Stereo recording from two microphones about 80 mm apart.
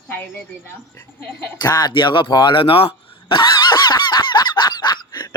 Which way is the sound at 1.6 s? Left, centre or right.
Left.